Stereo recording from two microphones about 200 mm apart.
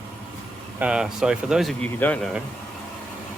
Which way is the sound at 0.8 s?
5° right (ahead or behind).